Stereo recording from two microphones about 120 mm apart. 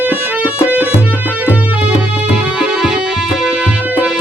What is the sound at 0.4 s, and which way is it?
Music, 15° right (ahead or behind).